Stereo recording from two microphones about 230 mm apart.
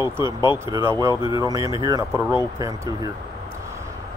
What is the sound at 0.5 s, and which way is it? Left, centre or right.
Speech, centre.